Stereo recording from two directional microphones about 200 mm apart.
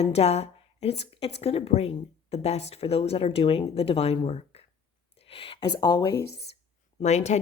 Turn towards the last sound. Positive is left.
turn(degrees=35)  # may be behind; listen again after turning